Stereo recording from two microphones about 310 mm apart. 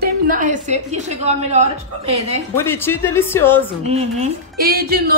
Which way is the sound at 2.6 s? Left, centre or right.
Centre.